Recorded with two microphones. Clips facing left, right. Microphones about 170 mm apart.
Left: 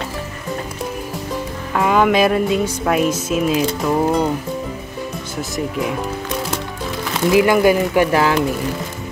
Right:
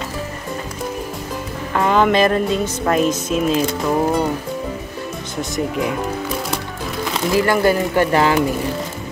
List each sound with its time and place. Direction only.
1.8 s speech: 5° left (ahead or behind)
7.2 s speech: 15° left (ahead or behind)